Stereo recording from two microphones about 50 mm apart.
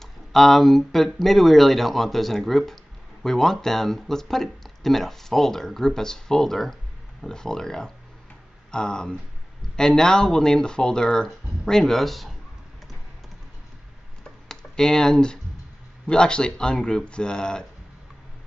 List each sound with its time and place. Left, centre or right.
0.0 s speech: centre
14.5 s speech: centre